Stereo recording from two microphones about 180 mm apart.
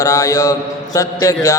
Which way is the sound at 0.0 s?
20° left (ahead or behind).